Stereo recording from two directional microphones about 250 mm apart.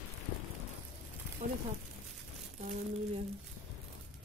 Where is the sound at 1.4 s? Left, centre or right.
Right.